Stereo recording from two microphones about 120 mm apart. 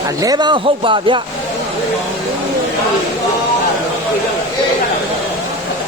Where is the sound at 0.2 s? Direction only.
35° right (ahead or behind).